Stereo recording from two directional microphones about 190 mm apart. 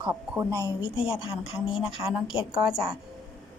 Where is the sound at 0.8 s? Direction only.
30° left (ahead or behind).